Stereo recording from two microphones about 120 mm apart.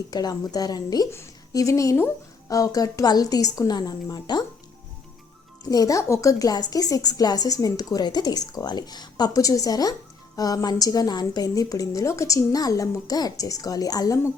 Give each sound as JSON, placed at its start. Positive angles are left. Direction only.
{"t": 0.1, "sound": "a woman's voice", "side_deg": 35}
{"t": 5.6, "sound": "a woman's voice", "side_deg": 30}